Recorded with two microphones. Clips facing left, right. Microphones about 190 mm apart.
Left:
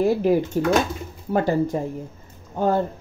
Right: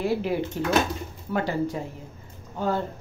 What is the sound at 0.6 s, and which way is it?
Speech, 45° left (ahead or behind).